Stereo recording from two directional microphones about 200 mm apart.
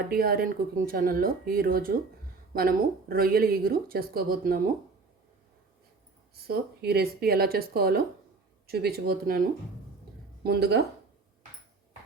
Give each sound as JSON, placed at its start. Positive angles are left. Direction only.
{"t": 0.1, "sound": "speech", "side_deg": -50}
{"t": 6.5, "sound": "speech", "side_deg": -50}
{"t": 10.4, "sound": "speech", "side_deg": -50}